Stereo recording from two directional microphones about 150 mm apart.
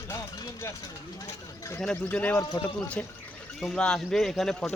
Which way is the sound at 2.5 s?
30° left (ahead or behind).